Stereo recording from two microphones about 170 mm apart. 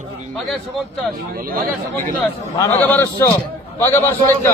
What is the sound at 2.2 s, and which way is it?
A man's voice, 10° left (ahead or behind).